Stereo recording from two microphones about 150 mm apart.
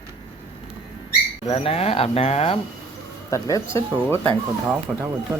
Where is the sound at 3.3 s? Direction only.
20° left (ahead or behind).